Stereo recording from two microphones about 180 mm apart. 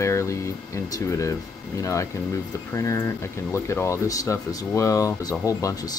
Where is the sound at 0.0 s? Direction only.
15° left (ahead or behind).